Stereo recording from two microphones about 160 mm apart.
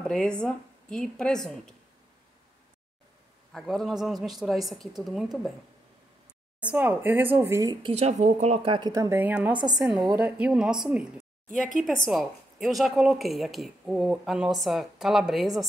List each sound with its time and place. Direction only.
0.0 s a woman's voice: 5° left (ahead or behind)
3.5 s a woman's voice: centre (ahead or behind)
6.6 s speech: 10° right (ahead or behind)
7.8 s speech: 40° right (ahead or behind)
8.7 s speech: 25° right (ahead or behind)
9.5 s a woman's voice: 30° right (ahead or behind)
9.8 s a woman's voice: centre (ahead or behind)